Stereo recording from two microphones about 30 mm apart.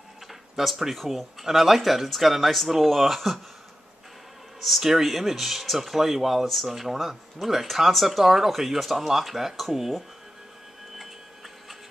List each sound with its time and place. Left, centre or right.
0.3 s a sound: centre
0.8 s speech: centre
4.6 s speech: centre
6.4 s speech: centre